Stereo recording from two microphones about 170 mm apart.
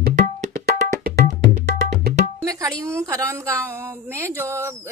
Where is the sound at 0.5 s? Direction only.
60° right (ahead or behind).